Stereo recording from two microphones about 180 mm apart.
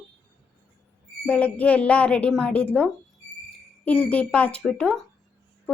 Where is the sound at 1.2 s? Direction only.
5° left (ahead or behind).